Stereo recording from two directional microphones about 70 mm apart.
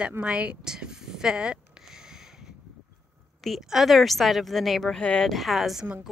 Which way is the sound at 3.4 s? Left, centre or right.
Centre.